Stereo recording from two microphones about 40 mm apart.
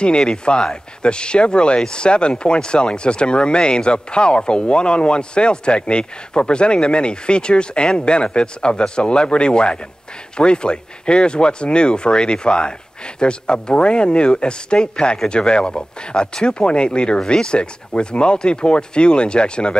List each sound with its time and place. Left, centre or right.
0.3 s speech: left